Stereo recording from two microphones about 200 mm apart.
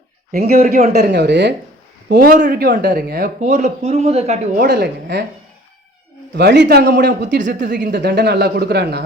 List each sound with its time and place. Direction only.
0.3 s speech: 50° right (ahead or behind)
2.0 s speech: 45° right (ahead or behind)
3.5 s a man's voice: 35° right (ahead or behind)
4.6 s speech: 55° right (ahead or behind)
6.3 s speech: 55° right (ahead or behind)
7.4 s speech: 45° right (ahead or behind)